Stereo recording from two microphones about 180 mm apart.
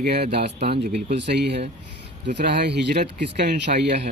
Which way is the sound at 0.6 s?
35° right (ahead or behind).